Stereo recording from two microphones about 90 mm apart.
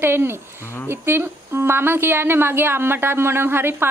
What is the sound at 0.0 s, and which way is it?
Speech, 25° right (ahead or behind).